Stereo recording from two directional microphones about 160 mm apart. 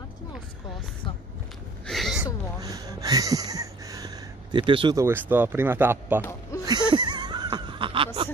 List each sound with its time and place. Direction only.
1.9 s a sound: centre (ahead or behind)
2.6 s speech: 20° right (ahead or behind)
4.9 s speech: 15° right (ahead or behind)
6.6 s wheeze: 25° right (ahead or behind)